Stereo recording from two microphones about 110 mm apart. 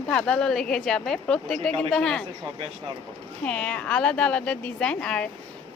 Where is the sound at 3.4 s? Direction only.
10° left (ahead or behind).